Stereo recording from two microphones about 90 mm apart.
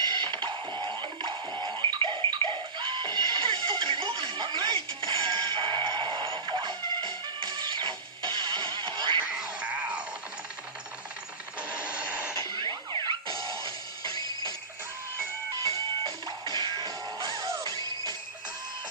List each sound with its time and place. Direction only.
0.0 s music: 60° right (ahead or behind)
9.3 s music: 15° right (ahead or behind)
11.7 s a sound: 15° right (ahead or behind)
12.3 s music: 50° right (ahead or behind)
16.0 s music: 60° right (ahead or behind)